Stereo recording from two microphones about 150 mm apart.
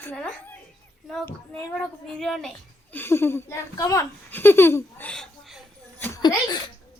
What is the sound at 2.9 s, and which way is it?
A woman's voice, 15° left (ahead or behind).